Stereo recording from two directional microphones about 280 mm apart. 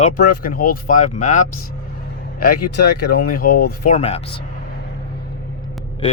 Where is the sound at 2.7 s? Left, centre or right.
Left.